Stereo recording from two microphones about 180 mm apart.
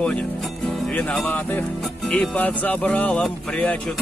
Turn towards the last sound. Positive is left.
turn(degrees=5)  # may be behind; listen again after turning